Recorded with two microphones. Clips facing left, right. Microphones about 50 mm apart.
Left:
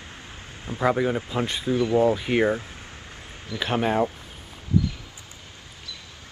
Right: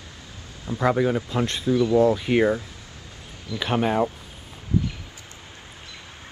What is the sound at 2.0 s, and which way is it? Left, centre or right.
Speech, centre.